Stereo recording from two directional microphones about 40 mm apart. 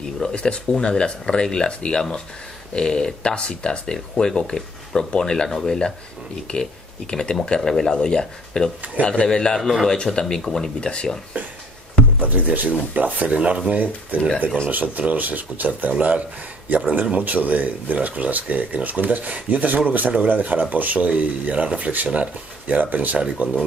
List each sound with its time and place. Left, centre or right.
0.3 s speech: left
9.0 s speech: left
9.3 s speech: centre
9.6 s a man's voice: centre
9.8 s speech: left
10.2 s speech: centre
11.3 s speech: right
16.6 s speech: right